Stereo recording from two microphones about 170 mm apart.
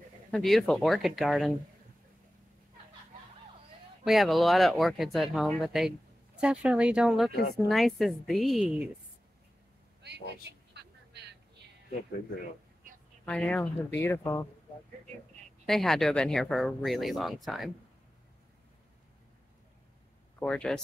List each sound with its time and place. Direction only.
0.3 s speech: centre (ahead or behind)
4.0 s speech: centre (ahead or behind)
10.7 s vehicle: 80° right
13.2 s speech: 5° left (ahead or behind)
15.6 s speech: centre (ahead or behind)
20.3 s speech: 5° left (ahead or behind)